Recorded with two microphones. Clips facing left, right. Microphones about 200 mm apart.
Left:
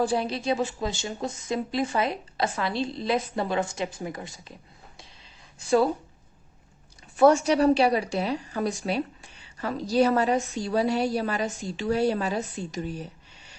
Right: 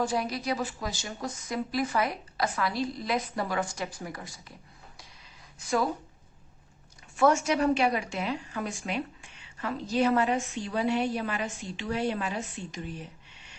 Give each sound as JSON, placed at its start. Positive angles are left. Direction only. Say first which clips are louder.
{"t": 0.0, "sound": "speech", "louder": "left 4 dB", "side_deg": 30}
{"t": 5.5, "sound": "a woman's voice", "louder": "left 6 dB", "side_deg": 30}
{"t": 7.2, "sound": "a woman's voice", "louder": "left 5 dB", "side_deg": 35}